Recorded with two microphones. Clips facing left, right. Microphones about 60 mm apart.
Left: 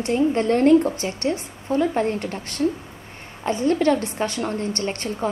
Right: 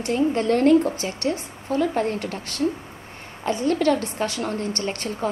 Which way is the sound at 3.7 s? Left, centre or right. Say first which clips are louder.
Left 2 dB; left.